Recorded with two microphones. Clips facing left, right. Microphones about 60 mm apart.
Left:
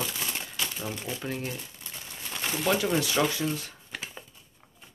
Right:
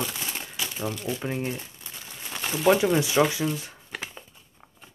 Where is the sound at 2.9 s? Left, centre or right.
Centre.